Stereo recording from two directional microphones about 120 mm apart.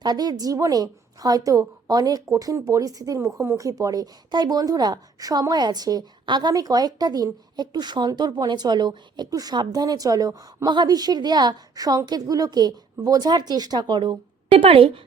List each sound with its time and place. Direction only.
0.0 s a woman's voice: 35° right (ahead or behind); by 15.0 s 50° right (ahead or behind)